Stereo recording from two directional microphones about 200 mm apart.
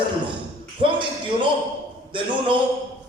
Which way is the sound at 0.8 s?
25° right (ahead or behind).